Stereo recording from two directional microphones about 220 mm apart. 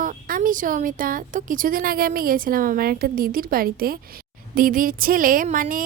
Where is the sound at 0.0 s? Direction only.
40° right (ahead or behind).